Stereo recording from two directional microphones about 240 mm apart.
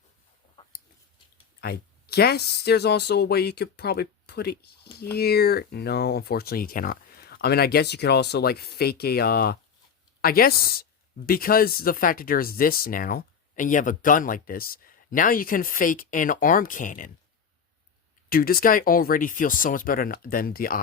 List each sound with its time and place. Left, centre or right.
1.6 s speech: left
18.3 s speech: left